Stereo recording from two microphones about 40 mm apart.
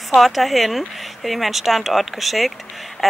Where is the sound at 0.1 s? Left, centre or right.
Centre.